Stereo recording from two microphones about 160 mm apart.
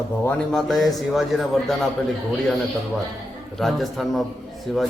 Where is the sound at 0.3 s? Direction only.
Centre (ahead or behind).